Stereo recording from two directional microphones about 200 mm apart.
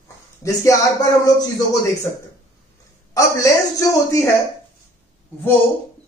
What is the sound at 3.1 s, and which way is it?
Speech, 15° left (ahead or behind).